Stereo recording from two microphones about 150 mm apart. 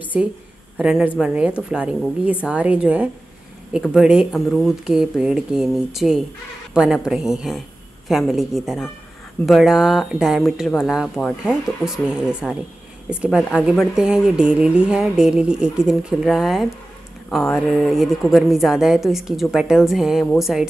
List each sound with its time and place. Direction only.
0.7 s speech: 10° right (ahead or behind)